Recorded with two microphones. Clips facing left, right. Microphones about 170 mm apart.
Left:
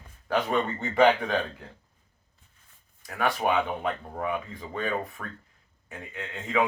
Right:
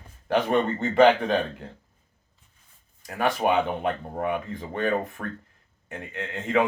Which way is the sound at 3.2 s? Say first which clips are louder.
Right 3 dB; 25° right (ahead or behind).